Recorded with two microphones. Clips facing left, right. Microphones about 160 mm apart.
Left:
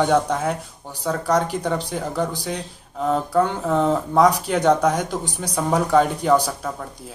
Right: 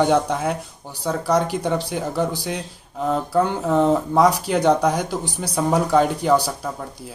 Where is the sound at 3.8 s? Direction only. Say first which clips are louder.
Left 1 dB; 5° right (ahead or behind).